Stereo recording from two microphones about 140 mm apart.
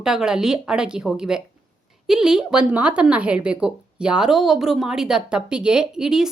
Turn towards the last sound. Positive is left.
turn(degrees=-5)  # may be behind; listen again after turning